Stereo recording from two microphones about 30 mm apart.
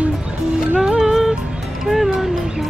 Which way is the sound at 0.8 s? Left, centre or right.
Right.